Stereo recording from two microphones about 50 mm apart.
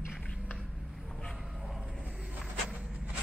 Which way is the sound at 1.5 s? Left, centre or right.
Centre.